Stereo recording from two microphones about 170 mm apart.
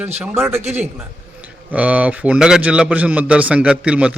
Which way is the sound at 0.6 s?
40° right (ahead or behind).